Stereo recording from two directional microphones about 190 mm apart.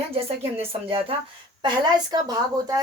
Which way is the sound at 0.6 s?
30° right (ahead or behind).